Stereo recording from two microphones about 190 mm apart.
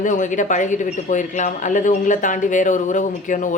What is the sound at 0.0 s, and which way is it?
A woman's voice, 40° left (ahead or behind).